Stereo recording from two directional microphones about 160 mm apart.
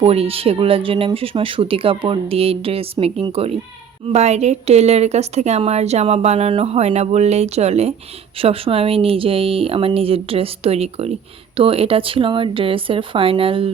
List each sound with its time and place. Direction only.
0.0 s a woman's voice: 35° right (ahead or behind)